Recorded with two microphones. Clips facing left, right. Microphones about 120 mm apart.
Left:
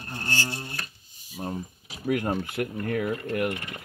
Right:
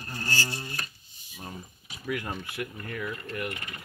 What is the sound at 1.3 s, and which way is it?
Speech, 35° left (ahead or behind).